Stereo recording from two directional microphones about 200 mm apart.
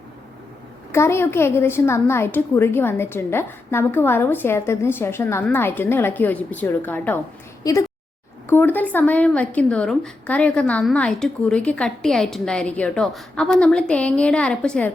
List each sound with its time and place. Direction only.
0.9 s a woman's voice: 15° left (ahead or behind)